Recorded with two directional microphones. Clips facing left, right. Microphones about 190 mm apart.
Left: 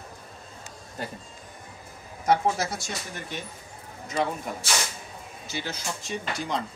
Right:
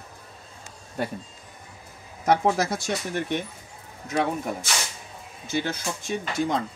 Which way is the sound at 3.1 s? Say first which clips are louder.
Right 9 dB; 65° right (ahead or behind).